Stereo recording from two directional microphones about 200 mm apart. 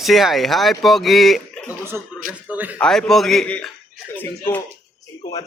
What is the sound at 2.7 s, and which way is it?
A man's voice, 5° left (ahead or behind).